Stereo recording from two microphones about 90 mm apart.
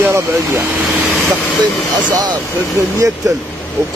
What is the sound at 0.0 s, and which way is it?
Speech, 25° right (ahead or behind).